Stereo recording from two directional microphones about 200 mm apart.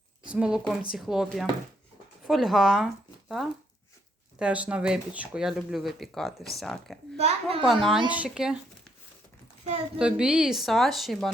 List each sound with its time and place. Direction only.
0.3 s speech: 5° right (ahead or behind)
7.2 s a child's voice: 30° right (ahead or behind)
7.6 s speech: centre (ahead or behind)
10.0 s speech: 5° right (ahead or behind)